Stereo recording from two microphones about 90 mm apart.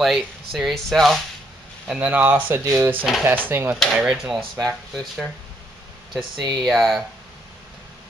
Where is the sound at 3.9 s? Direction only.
10° right (ahead or behind).